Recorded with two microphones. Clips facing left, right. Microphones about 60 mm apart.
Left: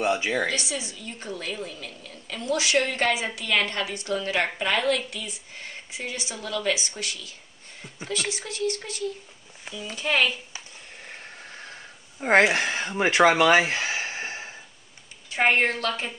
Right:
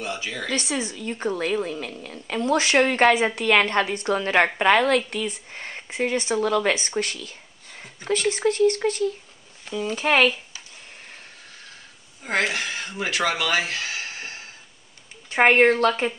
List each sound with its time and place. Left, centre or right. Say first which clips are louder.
0.0 s speech: left 6 dB; left
0.5 s a woman's voice: right 4 dB; right
9.9 s speech: right 4 dB; right
12.2 s speech: left 5 dB; left
15.2 s a sound: right 5 dB; right
15.5 s a woman's voice: right 7 dB; right